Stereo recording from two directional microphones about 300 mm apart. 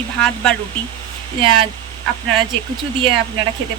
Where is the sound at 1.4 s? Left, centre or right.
Centre.